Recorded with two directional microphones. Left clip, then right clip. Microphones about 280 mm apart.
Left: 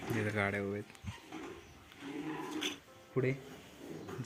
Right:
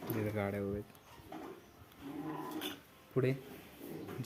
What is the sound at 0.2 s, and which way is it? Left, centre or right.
Speech, centre.